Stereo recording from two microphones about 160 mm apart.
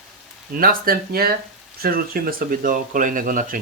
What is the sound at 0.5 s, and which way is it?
Speech, 65° right (ahead or behind).